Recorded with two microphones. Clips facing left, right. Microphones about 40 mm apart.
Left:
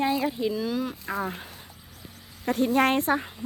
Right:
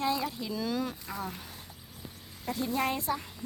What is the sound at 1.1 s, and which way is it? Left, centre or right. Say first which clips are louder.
Speech: left 7 dB; left.